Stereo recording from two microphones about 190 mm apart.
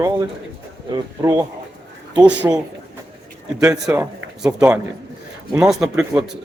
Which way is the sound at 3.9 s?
5° right (ahead or behind).